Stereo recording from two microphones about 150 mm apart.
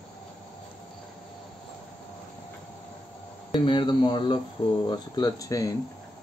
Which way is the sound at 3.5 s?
35° left (ahead or behind).